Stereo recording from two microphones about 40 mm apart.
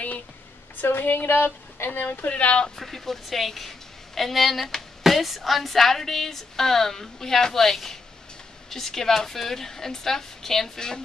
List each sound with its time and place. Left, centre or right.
0.7 s a woman's voice: left
1.9 s a woman's voice: left
2.8 s a woman's voice: centre